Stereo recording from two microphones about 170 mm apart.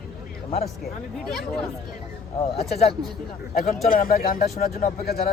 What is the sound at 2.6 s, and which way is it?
Speech, 40° left (ahead or behind).